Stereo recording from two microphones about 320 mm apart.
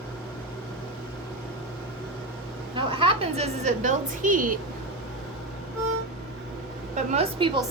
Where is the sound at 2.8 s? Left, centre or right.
Centre.